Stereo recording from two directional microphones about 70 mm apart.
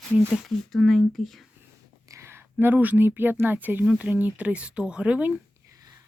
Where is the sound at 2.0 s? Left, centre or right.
Right; by 5.3 s centre.